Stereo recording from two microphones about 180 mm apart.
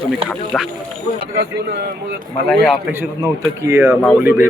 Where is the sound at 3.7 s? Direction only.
10° right (ahead or behind).